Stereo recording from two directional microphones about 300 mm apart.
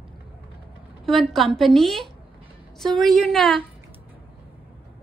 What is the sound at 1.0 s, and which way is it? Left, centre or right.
A woman's voice, centre.